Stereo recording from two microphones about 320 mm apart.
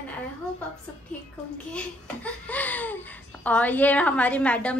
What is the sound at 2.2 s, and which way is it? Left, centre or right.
Speech, centre.